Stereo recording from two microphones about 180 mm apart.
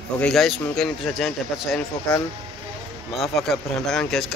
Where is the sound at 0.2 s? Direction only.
Centre (ahead or behind).